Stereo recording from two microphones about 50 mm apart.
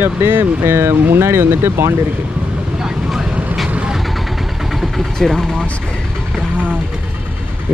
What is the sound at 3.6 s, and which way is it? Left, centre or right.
Vehicle, centre.